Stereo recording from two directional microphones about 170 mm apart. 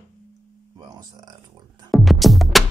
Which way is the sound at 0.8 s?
25° right (ahead or behind).